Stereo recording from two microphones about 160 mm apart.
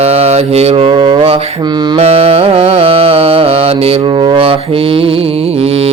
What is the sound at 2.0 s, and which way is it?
Music, 40° right (ahead or behind).